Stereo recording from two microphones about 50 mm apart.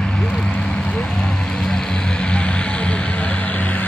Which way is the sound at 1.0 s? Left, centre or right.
Centre.